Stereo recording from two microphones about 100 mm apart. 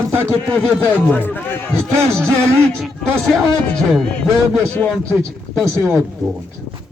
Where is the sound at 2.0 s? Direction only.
25° right (ahead or behind).